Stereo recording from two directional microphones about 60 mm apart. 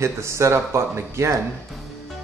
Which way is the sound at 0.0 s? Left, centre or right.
Right.